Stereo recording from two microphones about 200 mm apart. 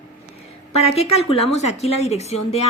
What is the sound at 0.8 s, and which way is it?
A woman's voice, 30° left (ahead or behind).